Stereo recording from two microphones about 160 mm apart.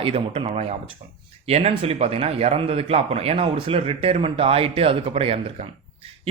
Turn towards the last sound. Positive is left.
turn(degrees=-40)  # may be behind; listen again after turning